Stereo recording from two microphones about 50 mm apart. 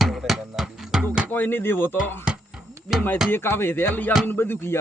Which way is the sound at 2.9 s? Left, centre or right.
Centre.